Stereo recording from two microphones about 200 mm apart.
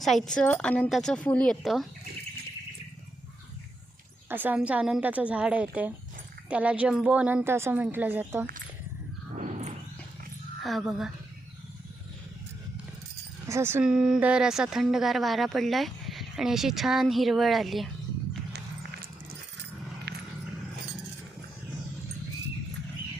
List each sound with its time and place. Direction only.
0.0 s speech: centre (ahead or behind)
4.3 s a woman's voice: 10° right (ahead or behind)
9.3 s a sound: 40° right (ahead or behind)
10.6 s speech: centre (ahead or behind)
13.5 s speech: 10° right (ahead or behind)
20.1 s a sound: 55° right (ahead or behind)